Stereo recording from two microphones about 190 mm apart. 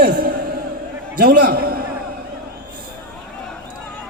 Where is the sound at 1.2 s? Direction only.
50° right (ahead or behind).